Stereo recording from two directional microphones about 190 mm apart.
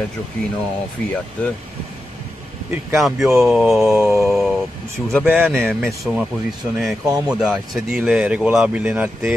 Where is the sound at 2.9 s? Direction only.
Centre (ahead or behind).